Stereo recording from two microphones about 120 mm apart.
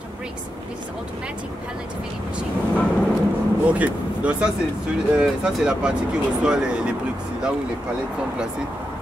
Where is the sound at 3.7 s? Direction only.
10° right (ahead or behind).